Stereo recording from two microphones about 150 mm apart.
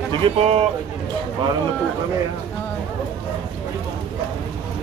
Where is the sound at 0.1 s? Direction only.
40° right (ahead or behind).